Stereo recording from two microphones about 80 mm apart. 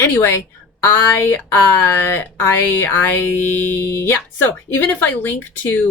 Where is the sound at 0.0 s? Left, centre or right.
Left.